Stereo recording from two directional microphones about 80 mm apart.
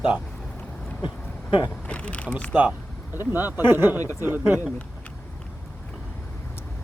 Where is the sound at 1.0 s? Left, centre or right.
Left.